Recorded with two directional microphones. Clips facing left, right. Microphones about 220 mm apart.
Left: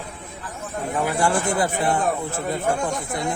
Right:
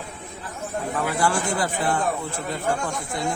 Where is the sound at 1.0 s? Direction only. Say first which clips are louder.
Left 2 dB; 25° left (ahead or behind).